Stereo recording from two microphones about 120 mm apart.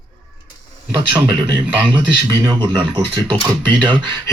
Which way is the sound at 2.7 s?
40° right (ahead or behind).